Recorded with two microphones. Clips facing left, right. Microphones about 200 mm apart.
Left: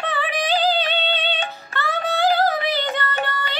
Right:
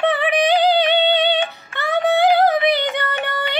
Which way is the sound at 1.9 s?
20° right (ahead or behind).